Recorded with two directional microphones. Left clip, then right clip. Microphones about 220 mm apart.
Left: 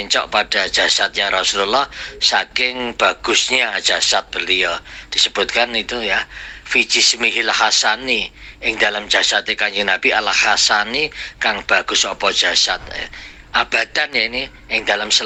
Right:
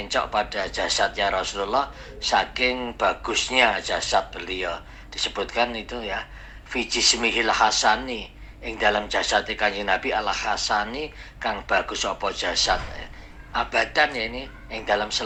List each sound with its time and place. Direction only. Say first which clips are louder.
0.0 s speech: left 7 dB; 20° left (ahead or behind)